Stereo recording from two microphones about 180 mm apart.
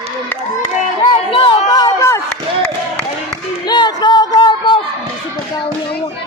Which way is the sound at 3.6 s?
25° left (ahead or behind).